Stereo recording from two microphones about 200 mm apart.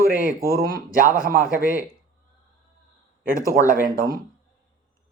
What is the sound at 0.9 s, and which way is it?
Speech, 45° right (ahead or behind).